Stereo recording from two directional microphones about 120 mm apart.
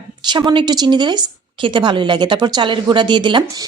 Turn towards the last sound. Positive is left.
turn(degrees=-40)  # may be behind; listen again after turning